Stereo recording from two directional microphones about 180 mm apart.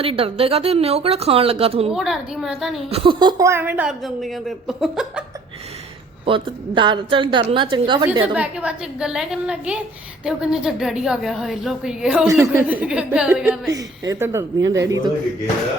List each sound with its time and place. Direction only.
0.0 s a woman's voice: 30° right (ahead or behind)
1.9 s a woman's voice: 5° right (ahead or behind)
2.9 s a woman's voice: 30° right (ahead or behind); by 5.2 s 5° right (ahead or behind)
6.2 s a woman's voice: 30° right (ahead or behind)
8.4 s a woman's voice: 5° right (ahead or behind)
13.7 s a woman's voice: 20° right (ahead or behind)